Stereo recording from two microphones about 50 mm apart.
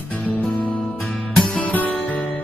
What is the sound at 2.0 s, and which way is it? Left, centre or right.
Music, left.